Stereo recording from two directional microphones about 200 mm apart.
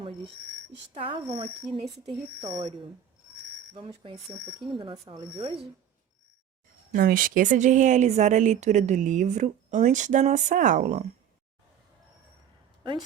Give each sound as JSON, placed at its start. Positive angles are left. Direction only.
{"t": 0.9, "sound": "speech", "side_deg": -30}
{"t": 3.8, "sound": "speech", "side_deg": -25}
{"t": 6.9, "sound": "speech", "side_deg": -45}